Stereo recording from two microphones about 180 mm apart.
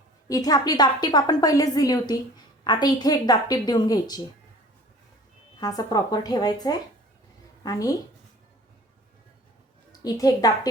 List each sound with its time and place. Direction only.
0.3 s a woman's voice: 20° left (ahead or behind)
5.5 s a woman's voice: 20° left (ahead or behind)
9.9 s a woman's voice: 20° left (ahead or behind)